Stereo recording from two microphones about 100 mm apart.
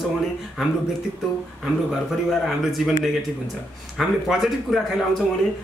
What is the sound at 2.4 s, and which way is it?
Speech, centre (ahead or behind).